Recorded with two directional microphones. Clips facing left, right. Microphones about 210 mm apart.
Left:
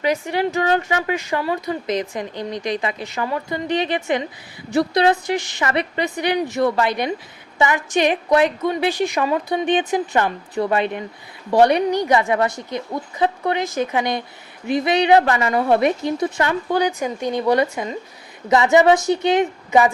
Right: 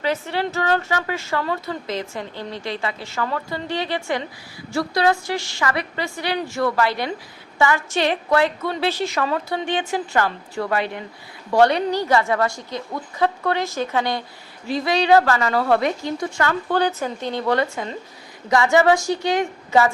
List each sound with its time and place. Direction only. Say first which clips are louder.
0.0 s a woman's voice: left 3 dB; 15° left (ahead or behind)